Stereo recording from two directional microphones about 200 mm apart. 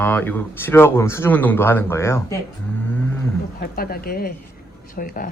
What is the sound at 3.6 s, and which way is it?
Speech, 50° left (ahead or behind).